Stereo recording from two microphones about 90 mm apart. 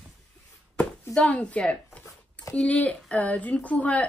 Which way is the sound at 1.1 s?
15° left (ahead or behind).